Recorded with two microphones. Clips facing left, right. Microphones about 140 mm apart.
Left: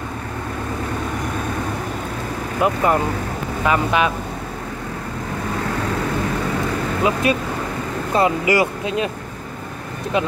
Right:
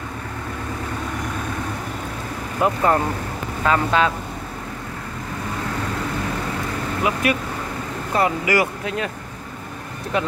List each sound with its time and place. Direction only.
2.6 s speech: 10° left (ahead or behind)
7.0 s speech: 25° left (ahead or behind)
10.1 s speech: 20° left (ahead or behind)